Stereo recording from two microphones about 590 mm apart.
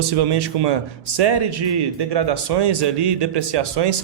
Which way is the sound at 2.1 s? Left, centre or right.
Right.